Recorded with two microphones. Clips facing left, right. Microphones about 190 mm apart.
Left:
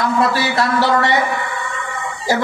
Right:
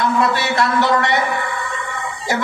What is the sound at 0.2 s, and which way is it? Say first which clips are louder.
Speech: left 1 dB; 35° left (ahead or behind).